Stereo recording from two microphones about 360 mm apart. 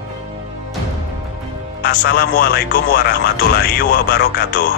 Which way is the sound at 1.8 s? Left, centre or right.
Left.